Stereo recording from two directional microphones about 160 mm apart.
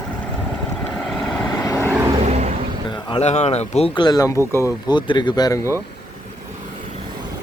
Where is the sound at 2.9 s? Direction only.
30° left (ahead or behind).